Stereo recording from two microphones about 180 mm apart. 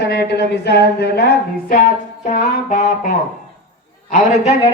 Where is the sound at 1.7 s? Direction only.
50° left (ahead or behind).